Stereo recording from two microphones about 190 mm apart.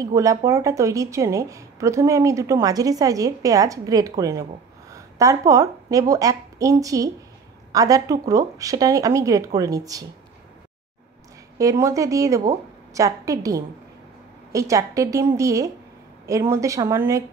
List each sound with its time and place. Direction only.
0.0 s a woman's voice: 15° right (ahead or behind)
11.5 s speech: 15° right (ahead or behind)